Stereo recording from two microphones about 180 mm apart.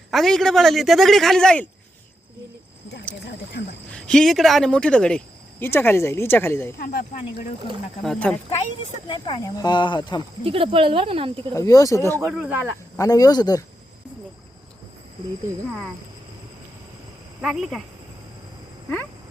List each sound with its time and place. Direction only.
0.1 s a man's voice: centre (ahead or behind)
3.9 s speech: 5° left (ahead or behind)
6.7 s speech: 55° left (ahead or behind)
8.0 s a man's voice: 5° left (ahead or behind)
9.0 s speech: 30° left (ahead or behind)
10.4 s speech: 30° right (ahead or behind)
11.5 s speech: 20° left (ahead or behind)
12.2 s a man's voice: 5° right (ahead or behind)
13.0 s speech: 20° left (ahead or behind)
17.4 s a man's voice: centre (ahead or behind)